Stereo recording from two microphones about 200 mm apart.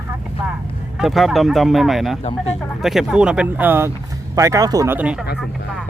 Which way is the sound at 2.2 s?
30° left (ahead or behind).